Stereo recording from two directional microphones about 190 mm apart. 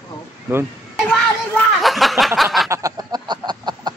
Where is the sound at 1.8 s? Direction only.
Centre (ahead or behind).